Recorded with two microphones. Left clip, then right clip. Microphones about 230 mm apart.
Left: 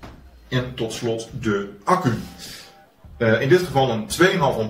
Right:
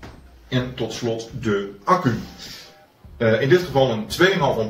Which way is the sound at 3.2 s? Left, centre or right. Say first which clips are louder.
Even; centre.